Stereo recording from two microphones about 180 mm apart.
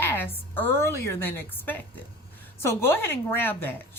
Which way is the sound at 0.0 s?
10° left (ahead or behind).